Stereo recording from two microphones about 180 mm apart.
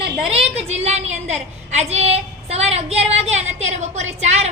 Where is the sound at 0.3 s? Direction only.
35° right (ahead or behind).